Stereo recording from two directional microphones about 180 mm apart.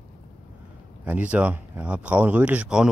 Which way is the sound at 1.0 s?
10° right (ahead or behind).